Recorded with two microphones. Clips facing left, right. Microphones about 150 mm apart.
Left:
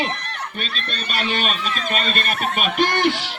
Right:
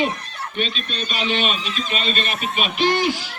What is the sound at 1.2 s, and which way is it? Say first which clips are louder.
A man's voice: right 1 dB; 45° left (ahead or behind).